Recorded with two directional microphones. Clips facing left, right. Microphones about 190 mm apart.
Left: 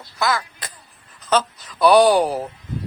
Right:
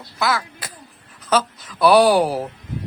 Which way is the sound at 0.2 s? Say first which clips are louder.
Even; 5° right (ahead or behind).